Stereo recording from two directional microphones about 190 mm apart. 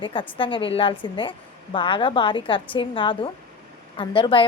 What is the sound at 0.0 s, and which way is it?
A woman's voice, 25° left (ahead or behind).